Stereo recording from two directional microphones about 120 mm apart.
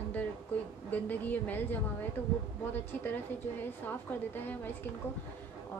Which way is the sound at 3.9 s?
15° left (ahead or behind).